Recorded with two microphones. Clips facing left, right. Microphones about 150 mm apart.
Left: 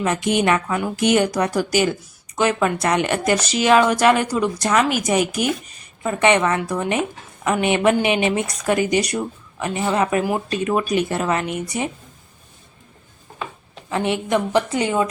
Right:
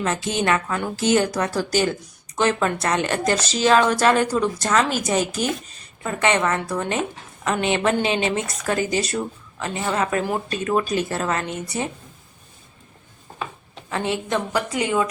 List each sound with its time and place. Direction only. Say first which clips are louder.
0.0 s speech: left 4 dB; 15° left (ahead or behind)
13.9 s speech: left 4 dB; 20° left (ahead or behind)
14.7 s speech: left 2 dB; 30° left (ahead or behind)